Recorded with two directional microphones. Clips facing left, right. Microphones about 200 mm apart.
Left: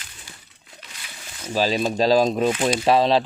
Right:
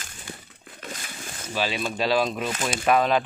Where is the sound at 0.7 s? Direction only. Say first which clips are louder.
Right 7 dB; 50° right (ahead or behind).